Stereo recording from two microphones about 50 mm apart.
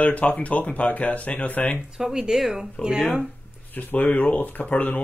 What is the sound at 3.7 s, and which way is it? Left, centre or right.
Speech, left.